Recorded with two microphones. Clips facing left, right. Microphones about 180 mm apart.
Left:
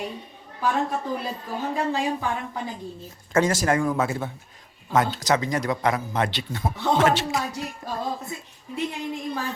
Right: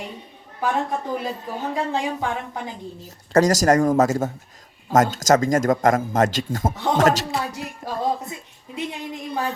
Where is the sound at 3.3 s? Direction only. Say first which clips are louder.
Right 5 dB; 40° right (ahead or behind).